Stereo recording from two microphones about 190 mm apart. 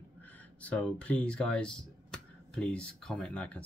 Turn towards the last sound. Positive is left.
turn(degrees=5)  # may be behind; listen again after turning